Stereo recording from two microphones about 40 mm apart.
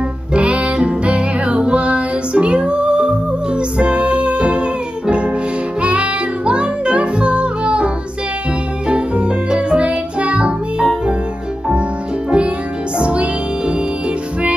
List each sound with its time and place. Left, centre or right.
0.3 s music: right
12.3 s music: right